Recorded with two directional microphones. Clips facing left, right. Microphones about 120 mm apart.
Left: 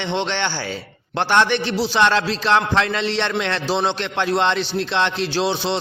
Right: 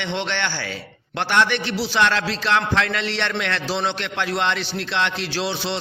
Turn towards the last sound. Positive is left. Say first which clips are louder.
# left 4 dB
turn(degrees=25)  # may be behind; listen again after turning